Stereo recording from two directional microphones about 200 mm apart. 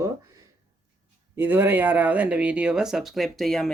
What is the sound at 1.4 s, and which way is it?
Speech, 10° right (ahead or behind).